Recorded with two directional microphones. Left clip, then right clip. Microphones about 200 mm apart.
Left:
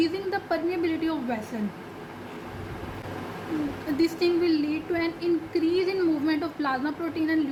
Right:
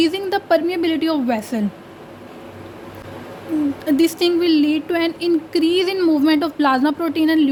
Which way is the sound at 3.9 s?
60° right (ahead or behind).